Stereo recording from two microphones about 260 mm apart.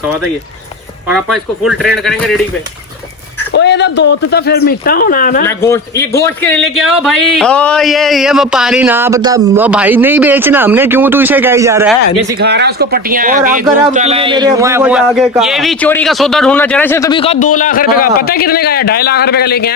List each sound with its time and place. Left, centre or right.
1.0 s speech: centre
3.5 s speech: left
5.5 s a man's voice: centre
12.4 s speech: right; by 19.7 s left